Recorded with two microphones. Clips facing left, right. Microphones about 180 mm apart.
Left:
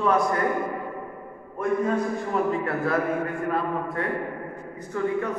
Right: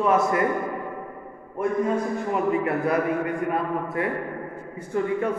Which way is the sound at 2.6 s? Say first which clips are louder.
Right 2 dB; 20° right (ahead or behind).